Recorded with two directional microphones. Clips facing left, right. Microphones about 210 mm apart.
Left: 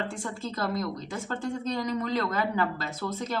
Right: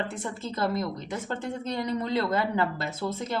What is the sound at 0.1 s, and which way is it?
Speech, 20° right (ahead or behind).